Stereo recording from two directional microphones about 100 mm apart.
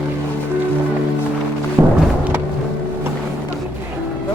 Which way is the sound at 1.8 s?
30° right (ahead or behind).